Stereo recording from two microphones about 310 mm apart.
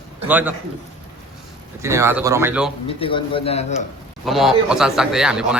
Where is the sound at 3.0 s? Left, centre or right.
Centre.